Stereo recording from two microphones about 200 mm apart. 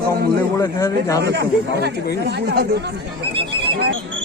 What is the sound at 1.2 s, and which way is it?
Speech, 55° right (ahead or behind).